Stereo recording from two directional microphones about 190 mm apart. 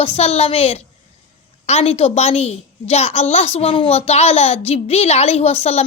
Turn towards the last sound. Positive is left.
turn(degrees=35)  # may be behind; listen again after turning